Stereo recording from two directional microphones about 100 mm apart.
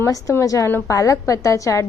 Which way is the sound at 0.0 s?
30° left (ahead or behind).